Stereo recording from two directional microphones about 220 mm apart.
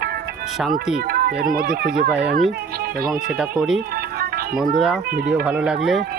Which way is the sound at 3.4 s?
5° right (ahead or behind).